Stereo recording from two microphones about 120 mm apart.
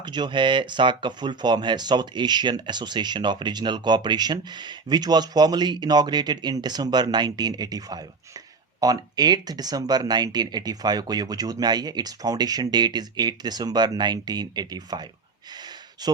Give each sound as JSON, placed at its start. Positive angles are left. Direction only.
{"t": 0.0, "sound": "speech", "side_deg": -40}